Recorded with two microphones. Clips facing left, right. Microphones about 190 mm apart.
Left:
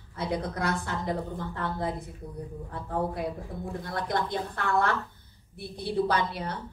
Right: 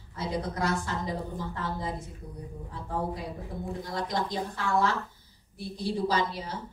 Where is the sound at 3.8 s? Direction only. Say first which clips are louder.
Left 2 dB; 60° left (ahead or behind).